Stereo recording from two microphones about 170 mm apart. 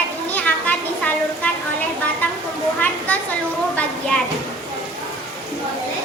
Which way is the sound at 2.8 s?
10° left (ahead or behind).